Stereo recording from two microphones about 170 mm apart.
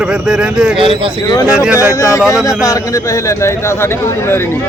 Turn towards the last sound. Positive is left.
turn(degrees=15)  # may be behind; listen again after turning